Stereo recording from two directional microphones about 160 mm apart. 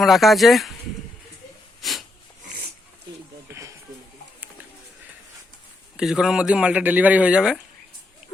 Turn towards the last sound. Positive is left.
turn(degrees=-5)  # may be behind; listen again after turning